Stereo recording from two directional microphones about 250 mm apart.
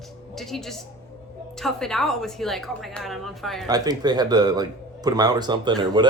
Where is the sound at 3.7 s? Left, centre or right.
Centre.